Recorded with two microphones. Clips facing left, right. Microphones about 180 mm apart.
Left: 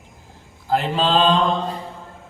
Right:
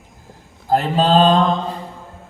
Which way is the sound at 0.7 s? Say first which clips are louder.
Right 4 dB; 45° right (ahead or behind).